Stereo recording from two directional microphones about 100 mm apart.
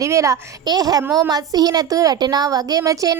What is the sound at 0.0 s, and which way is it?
A child's voice, 30° right (ahead or behind).